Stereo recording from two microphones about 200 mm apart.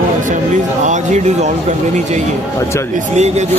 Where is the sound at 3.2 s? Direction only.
35° right (ahead or behind).